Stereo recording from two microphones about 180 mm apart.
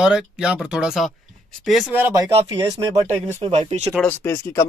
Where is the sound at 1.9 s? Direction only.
15° right (ahead or behind).